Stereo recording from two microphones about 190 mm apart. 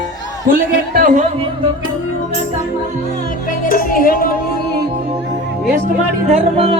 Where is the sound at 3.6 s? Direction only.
50° left (ahead or behind).